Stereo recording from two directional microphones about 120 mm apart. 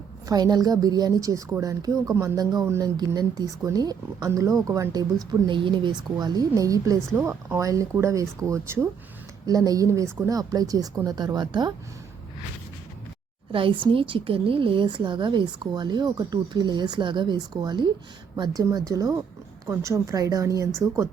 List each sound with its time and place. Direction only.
0.3 s a woman's voice: 35° right (ahead or behind)
5.3 s a woman's voice: 40° right (ahead or behind)
13.5 s a woman's voice: 45° right (ahead or behind); by 20.7 s 25° right (ahead or behind)